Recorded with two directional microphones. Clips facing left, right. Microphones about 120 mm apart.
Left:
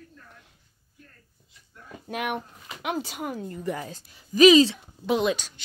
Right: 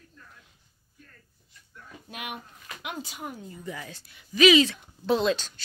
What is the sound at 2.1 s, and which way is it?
Speech, 60° left (ahead or behind).